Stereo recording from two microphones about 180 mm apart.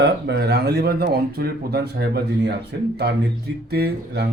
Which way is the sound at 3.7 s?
65° right (ahead or behind).